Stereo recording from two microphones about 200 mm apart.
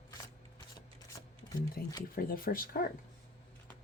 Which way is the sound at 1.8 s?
45° left (ahead or behind).